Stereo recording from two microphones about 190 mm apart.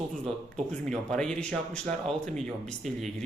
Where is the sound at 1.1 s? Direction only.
5° left (ahead or behind).